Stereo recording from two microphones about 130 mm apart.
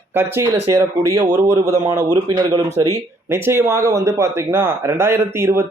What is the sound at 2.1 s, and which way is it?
Speech, 35° right (ahead or behind).